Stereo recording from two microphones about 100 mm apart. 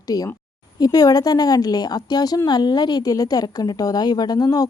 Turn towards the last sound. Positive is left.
turn(degrees=40)  # may be behind; listen again after turning